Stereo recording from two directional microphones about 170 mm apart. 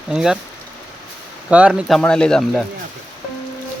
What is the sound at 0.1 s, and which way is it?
Speech, 5° right (ahead or behind).